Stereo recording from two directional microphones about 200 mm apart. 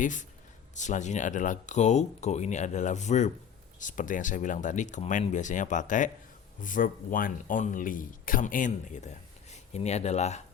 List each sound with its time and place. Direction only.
0.0 s speech: 40° left (ahead or behind)